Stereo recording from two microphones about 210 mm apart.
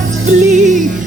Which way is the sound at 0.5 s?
35° right (ahead or behind).